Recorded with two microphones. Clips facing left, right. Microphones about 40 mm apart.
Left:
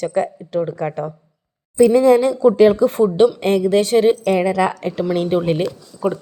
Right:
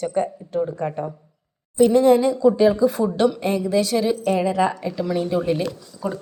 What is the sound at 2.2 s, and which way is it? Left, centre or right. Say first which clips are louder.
A woman's voice: left 4 dB; left.